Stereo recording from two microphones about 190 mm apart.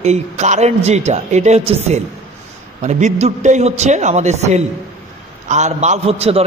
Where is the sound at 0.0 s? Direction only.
35° right (ahead or behind).